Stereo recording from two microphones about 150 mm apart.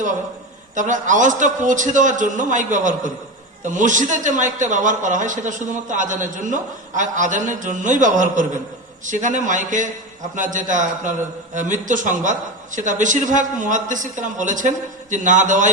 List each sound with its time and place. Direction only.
0.8 s a man's voice: 55° right (ahead or behind)